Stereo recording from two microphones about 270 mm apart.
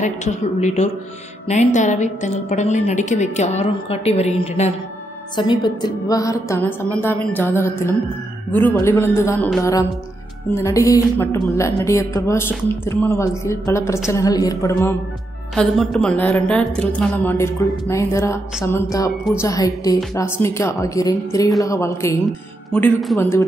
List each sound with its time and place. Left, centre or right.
0.0 s a woman's voice: left; by 23.1 s centre